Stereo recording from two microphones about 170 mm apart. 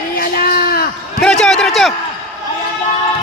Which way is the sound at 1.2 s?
5° left (ahead or behind).